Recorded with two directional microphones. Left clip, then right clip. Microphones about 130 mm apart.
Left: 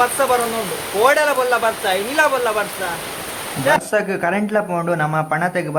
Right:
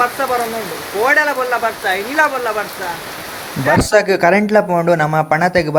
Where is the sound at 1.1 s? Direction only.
5° left (ahead or behind).